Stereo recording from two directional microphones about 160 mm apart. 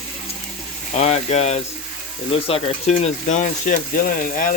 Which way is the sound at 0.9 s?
45° left (ahead or behind).